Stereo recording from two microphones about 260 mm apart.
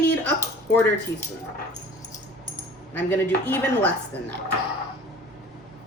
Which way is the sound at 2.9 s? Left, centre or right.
Centre.